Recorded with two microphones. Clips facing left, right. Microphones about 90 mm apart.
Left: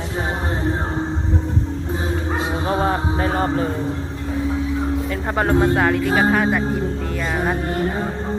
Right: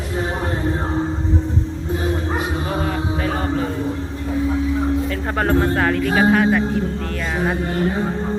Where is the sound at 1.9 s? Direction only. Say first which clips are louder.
Right 3 dB; 25° left (ahead or behind).